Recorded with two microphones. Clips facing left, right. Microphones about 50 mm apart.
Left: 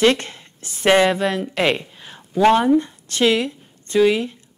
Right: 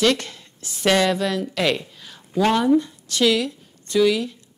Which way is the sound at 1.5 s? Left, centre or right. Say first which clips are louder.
Left 2 dB; left.